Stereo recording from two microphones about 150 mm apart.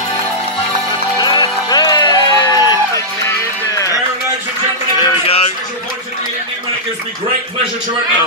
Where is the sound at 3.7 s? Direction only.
20° left (ahead or behind).